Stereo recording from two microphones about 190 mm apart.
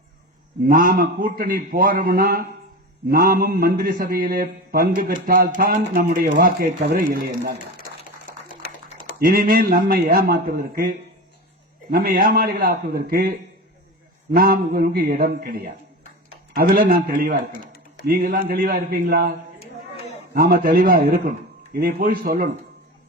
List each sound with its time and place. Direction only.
0.6 s a man's voice: 45° right (ahead or behind)
8.9 s typing: 45° left (ahead or behind)
9.1 s a man's voice: 55° right (ahead or behind)
14.3 s a man's voice: 50° right (ahead or behind)
19.5 s a sound: 35° left (ahead or behind)
20.3 s a man's voice: 50° right (ahead or behind)